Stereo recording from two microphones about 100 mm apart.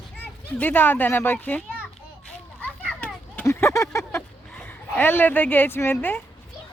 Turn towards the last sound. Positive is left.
turn(degrees=20)  # may be behind; listen again after turning